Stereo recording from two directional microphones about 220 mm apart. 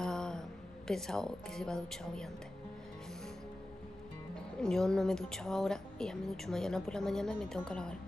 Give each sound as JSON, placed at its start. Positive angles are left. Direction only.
{"t": 0.0, "sound": "a woman's voice", "side_deg": 5}
{"t": 4.6, "sound": "a woman's voice", "side_deg": 5}